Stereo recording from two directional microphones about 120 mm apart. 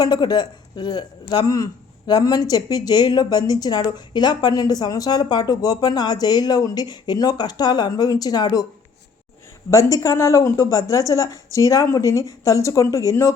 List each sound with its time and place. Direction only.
0.0 s a man's voice: 35° left (ahead or behind)
9.6 s a woman's voice: 25° left (ahead or behind)